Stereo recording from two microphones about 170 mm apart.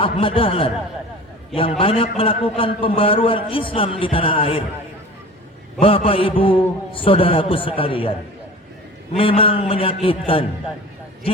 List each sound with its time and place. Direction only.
0.0 s a man's voice: 30° left (ahead or behind)
1.8 s a man's voice: 35° left (ahead or behind)
5.8 s a man's voice: 35° left (ahead or behind)
9.1 s a man's voice: 30° left (ahead or behind)